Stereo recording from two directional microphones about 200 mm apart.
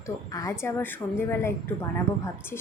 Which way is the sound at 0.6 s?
10° left (ahead or behind).